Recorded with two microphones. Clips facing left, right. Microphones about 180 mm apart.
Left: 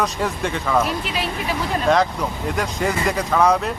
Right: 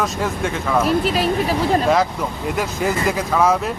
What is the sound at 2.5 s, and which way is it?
Speech, 5° right (ahead or behind).